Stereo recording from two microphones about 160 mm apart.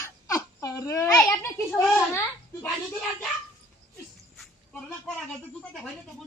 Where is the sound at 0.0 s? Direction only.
20° left (ahead or behind).